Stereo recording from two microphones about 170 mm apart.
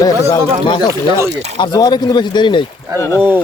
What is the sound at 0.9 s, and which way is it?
Speech, 15° right (ahead or behind).